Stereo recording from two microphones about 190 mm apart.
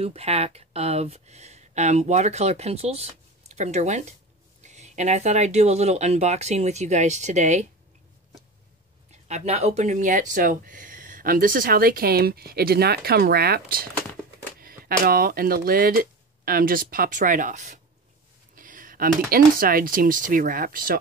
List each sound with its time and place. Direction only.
0.0 s speech: 35° right (ahead or behind)
9.3 s speech: 35° right (ahead or behind)